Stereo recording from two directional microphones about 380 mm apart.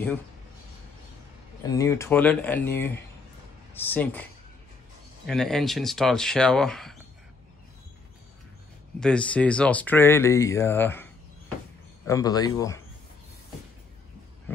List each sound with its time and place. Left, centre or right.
1.6 s speech: centre
9.0 s speech: centre
12.1 s speech: centre